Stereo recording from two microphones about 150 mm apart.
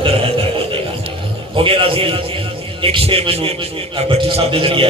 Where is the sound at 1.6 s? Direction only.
35° right (ahead or behind).